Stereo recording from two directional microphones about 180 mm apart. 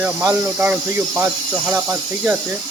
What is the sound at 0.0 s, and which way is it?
Speech, 10° right (ahead or behind).